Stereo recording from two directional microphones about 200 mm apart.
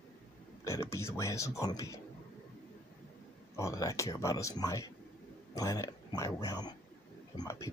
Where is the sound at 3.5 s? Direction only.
15° left (ahead or behind).